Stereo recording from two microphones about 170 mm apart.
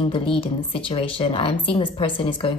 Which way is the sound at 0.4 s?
30° left (ahead or behind).